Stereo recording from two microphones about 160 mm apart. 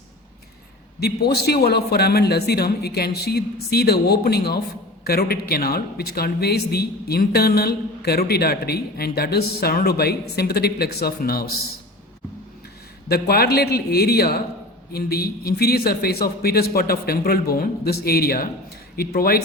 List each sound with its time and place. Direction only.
0.9 s a man's voice: 85° left; by 11.4 s 70° left (ahead or behind)
13.1 s speech: 75° left (ahead or behind)